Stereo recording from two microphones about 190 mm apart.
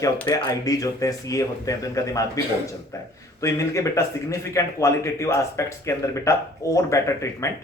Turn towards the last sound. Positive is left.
turn(degrees=15)  # may be behind; listen again after turning